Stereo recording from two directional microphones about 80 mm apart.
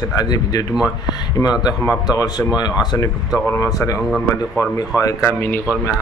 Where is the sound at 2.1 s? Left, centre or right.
Left.